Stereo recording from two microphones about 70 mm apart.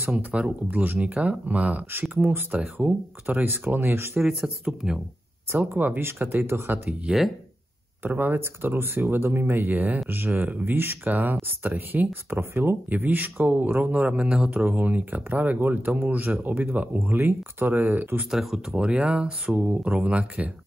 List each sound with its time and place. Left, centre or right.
0.2 s speech: right
4.2 s speech: centre
5.5 s speech: right
8.0 s speech: right
18.3 s speech: centre
18.8 s speech: centre